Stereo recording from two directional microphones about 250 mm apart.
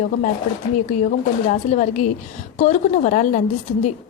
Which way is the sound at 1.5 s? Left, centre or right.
Left.